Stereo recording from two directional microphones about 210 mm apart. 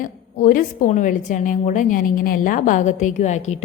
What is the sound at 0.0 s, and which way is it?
A woman's voice, 40° left (ahead or behind).